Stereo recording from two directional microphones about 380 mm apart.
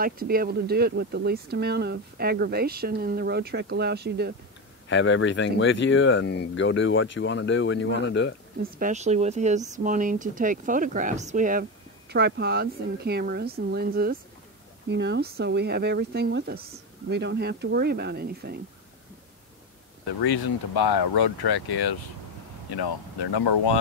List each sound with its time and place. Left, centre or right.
0.0 s speech: right
4.8 s speech: left
8.7 s speech: centre
20.2 s speech: left
22.8 s speech: left